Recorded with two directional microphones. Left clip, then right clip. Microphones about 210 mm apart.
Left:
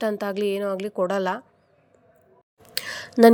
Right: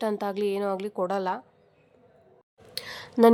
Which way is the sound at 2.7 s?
20° left (ahead or behind).